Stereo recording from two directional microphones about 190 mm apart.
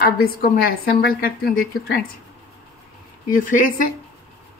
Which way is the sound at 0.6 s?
55° left (ahead or behind).